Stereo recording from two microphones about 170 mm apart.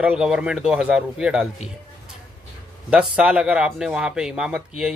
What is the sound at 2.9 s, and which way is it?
Speech, 5° right (ahead or behind).